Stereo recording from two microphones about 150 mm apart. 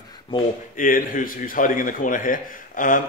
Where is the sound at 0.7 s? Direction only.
65° left (ahead or behind).